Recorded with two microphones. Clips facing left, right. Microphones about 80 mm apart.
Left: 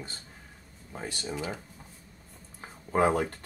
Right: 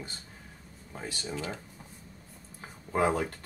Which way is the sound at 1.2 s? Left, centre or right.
Centre.